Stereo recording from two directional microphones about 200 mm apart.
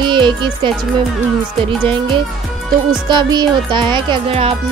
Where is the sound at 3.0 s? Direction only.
20° right (ahead or behind).